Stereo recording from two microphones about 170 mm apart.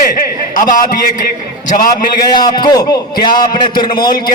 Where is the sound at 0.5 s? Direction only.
50° left (ahead or behind).